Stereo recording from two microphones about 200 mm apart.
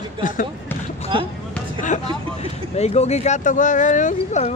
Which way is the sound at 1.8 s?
35° left (ahead or behind).